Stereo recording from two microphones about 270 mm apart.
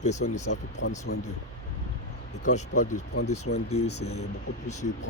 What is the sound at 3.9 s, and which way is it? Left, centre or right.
Speech, left.